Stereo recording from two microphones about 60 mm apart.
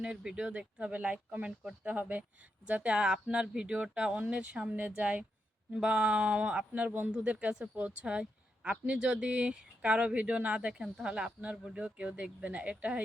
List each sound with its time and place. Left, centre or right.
0.0 s speech: centre
11.8 s speech: right